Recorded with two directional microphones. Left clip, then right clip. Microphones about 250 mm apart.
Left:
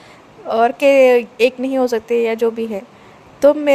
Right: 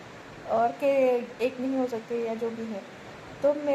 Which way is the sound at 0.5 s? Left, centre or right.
Left.